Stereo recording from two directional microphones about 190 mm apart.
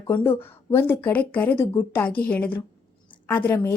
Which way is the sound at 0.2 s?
10° left (ahead or behind).